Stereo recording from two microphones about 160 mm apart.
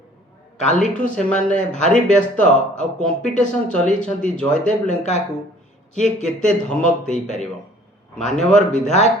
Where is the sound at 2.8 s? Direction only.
5° left (ahead or behind).